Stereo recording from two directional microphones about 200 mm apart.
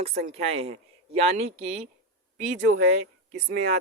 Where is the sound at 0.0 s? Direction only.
30° right (ahead or behind).